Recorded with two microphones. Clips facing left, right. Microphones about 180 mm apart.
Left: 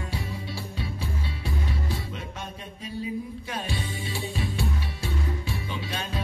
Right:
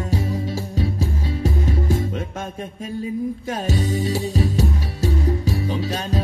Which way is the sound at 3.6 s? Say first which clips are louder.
Right 11 dB; 40° right (ahead or behind).